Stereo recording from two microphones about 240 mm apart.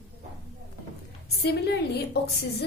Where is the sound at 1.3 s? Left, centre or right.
Left.